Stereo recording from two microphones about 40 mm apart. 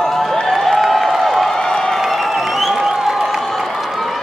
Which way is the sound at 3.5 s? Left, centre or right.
Centre.